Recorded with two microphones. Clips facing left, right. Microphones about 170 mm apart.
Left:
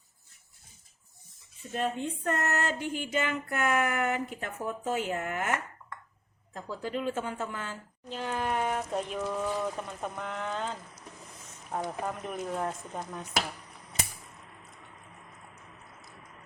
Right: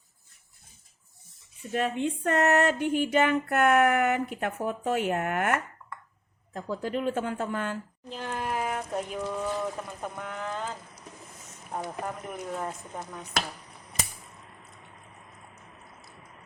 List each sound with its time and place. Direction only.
1.7 s a sound: 70° right (ahead or behind)
8.1 s speech: centre (ahead or behind)
11.9 s speech: centre (ahead or behind)